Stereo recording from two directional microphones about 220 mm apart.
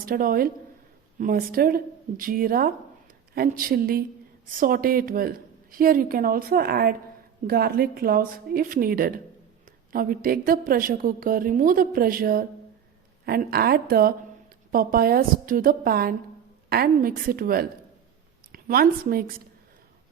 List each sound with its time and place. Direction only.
0.0 s a woman's voice: 40° right (ahead or behind)